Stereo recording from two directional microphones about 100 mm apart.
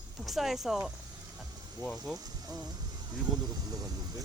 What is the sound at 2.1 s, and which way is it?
Speech, 40° right (ahead or behind).